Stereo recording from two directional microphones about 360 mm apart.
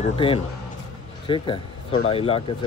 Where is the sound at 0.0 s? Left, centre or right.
Centre.